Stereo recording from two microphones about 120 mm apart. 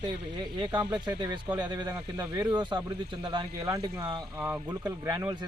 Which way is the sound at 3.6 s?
30° right (ahead or behind).